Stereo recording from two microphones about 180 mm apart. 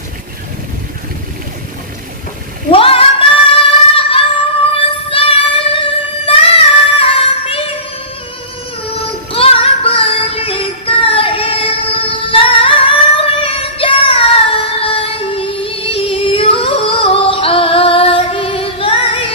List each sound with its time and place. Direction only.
2.7 s female singing: 30° left (ahead or behind)
4.7 s music: 30° left (ahead or behind)
9.3 s child singing: 30° left (ahead or behind)
11.9 s singing: 30° left (ahead or behind)